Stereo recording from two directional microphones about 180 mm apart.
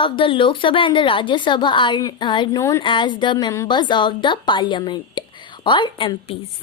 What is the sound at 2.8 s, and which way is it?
A woman's voice, 25° left (ahead or behind).